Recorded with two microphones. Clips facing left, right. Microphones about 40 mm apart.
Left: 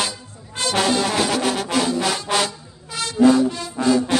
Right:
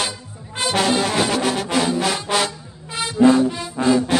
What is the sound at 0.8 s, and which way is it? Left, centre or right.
Brass instrument, centre.